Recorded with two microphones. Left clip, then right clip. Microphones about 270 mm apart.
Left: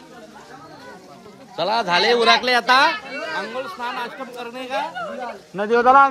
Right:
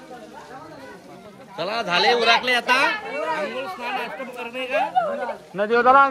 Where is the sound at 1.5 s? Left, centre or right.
Left.